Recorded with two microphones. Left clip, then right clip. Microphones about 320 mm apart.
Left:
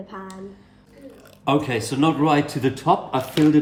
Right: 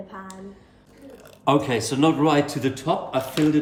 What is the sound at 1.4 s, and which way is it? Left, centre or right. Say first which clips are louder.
A man's voice: right 1 dB; centre.